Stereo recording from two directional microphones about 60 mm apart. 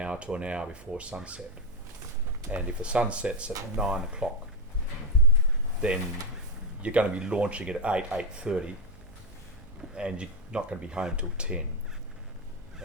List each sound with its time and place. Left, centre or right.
0.0 s speech: centre
2.5 s speech: centre
5.8 s speech: centre
9.9 s speech: centre